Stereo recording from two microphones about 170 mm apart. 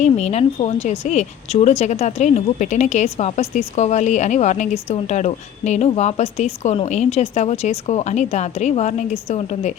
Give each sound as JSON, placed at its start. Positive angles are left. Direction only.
{"t": 0.0, "sound": "speech", "side_deg": 40}